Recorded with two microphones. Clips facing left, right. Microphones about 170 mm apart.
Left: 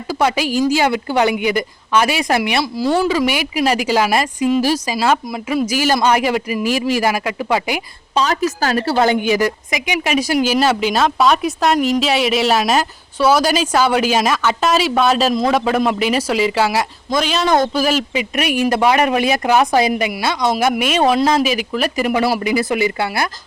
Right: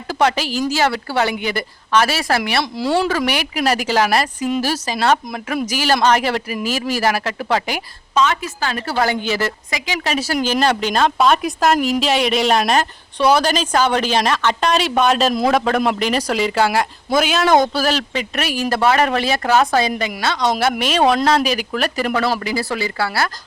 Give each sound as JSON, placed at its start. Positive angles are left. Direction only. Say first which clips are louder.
{"t": 0.1, "sound": "a woman's voice", "louder": "left 1 dB", "side_deg": 10}
{"t": 2.7, "sound": "speech", "louder": "left 2 dB", "side_deg": 0}
{"t": 3.8, "sound": "speech", "louder": "left 1 dB", "side_deg": 10}
{"t": 8.1, "sound": "a woman's voice", "louder": "left 1 dB", "side_deg": 35}
{"t": 9.0, "sound": "speech", "louder": "left 3 dB", "side_deg": 20}
{"t": 17.1, "sound": "speech", "louder": "right 1 dB", "side_deg": -5}
{"t": 17.7, "sound": "speech", "louder": "left 2 dB", "side_deg": 10}